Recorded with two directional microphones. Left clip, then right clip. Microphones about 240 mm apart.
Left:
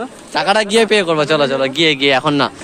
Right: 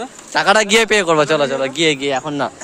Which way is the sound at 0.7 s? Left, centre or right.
Right.